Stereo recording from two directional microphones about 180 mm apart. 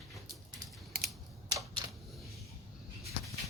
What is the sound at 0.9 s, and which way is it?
Typing, 55° right (ahead or behind).